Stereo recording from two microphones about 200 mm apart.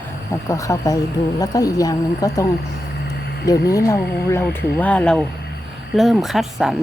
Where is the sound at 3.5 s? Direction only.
15° left (ahead or behind); by 6.7 s centre (ahead or behind).